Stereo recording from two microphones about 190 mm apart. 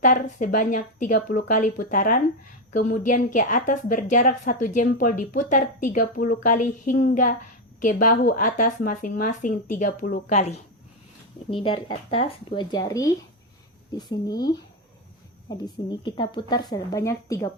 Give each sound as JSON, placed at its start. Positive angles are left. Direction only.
{"t": 0.0, "sound": "a woman's voice", "side_deg": 45}
{"t": 11.5, "sound": "speech", "side_deg": 30}